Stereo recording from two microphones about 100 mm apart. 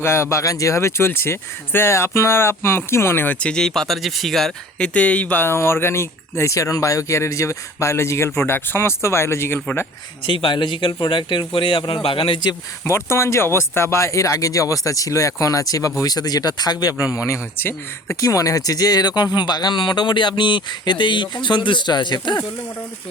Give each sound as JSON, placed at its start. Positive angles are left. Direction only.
{"t": 0.0, "sound": "speech", "side_deg": 25}
{"t": 4.9, "sound": "speech", "side_deg": 15}
{"t": 10.2, "sound": "speech", "side_deg": 50}
{"t": 12.8, "sound": "speech", "side_deg": 25}
{"t": 18.2, "sound": "speech", "side_deg": 35}